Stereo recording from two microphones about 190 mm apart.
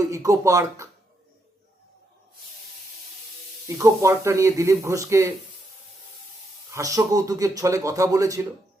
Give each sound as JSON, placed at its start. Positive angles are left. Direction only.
{"t": 0.0, "sound": "speech", "side_deg": -15}
{"t": 3.7, "sound": "speech", "side_deg": -15}
{"t": 6.7, "sound": "speech", "side_deg": -15}